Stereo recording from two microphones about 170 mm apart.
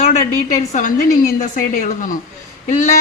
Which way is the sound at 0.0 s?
40° left (ahead or behind).